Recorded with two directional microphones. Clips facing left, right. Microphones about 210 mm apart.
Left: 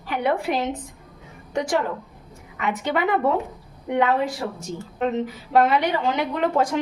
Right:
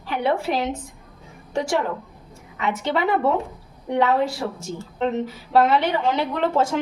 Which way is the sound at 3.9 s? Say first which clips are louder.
Right 1 dB; 20° left (ahead or behind).